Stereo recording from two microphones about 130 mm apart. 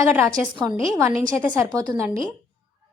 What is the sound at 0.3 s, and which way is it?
Speech, 25° right (ahead or behind).